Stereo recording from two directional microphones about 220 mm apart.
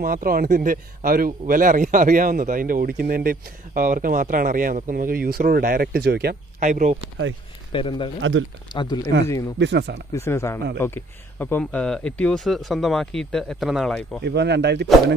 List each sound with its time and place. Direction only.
0.0 s a man's voice: 40° right (ahead or behind)
7.7 s speech: 25° left (ahead or behind)
8.2 s speech: 60° right (ahead or behind)
8.7 s speech: 20° left (ahead or behind)
9.6 s speech: 50° right (ahead or behind)
10.1 s speech: 10° left (ahead or behind)
14.2 s speech: 50° right (ahead or behind)